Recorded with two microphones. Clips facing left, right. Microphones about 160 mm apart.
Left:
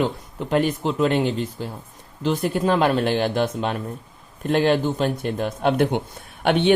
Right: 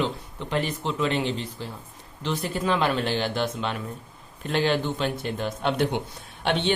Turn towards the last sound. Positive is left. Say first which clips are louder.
# left 6 dB
turn(degrees=60)  # may be behind; listen again after turning